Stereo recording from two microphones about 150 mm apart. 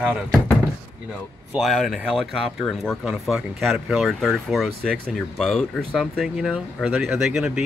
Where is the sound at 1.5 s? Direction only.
Centre (ahead or behind).